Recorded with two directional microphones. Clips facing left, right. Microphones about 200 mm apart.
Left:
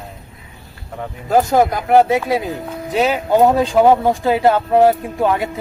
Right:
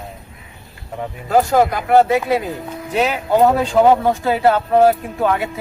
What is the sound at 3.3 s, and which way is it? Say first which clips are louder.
Speech: left 1 dB; 15° left (ahead or behind).